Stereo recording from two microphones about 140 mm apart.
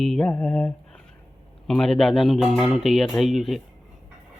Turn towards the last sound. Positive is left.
turn(degrees=0)  # may be behind; listen again after turning